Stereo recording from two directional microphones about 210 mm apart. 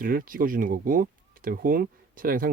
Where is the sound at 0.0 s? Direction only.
40° right (ahead or behind).